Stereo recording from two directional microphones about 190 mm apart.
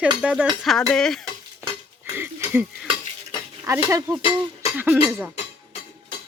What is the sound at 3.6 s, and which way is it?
Speech, 15° right (ahead or behind).